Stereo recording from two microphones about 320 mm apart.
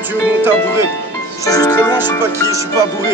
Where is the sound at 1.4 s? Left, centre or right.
Centre.